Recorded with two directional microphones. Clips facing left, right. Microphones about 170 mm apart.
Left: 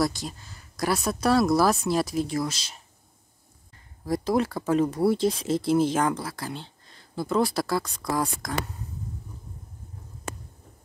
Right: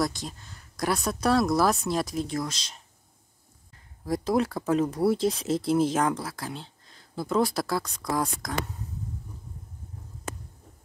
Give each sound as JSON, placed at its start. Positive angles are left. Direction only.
{"t": 0.0, "sound": "speech", "side_deg": 5}